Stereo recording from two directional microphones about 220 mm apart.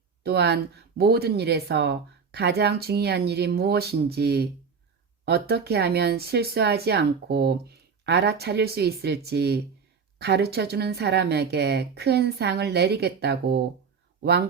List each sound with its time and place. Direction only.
0.2 s speech: 45° right (ahead or behind)